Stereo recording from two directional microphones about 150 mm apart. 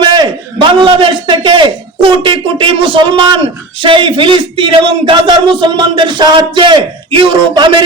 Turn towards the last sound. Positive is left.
turn(degrees=-30)  # may be behind; listen again after turning